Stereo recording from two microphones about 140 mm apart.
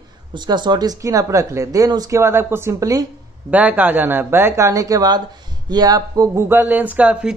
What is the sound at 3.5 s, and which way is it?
Speech, 10° right (ahead or behind).